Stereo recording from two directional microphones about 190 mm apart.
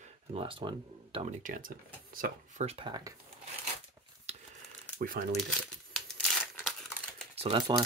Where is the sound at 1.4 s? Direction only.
45° right (ahead or behind).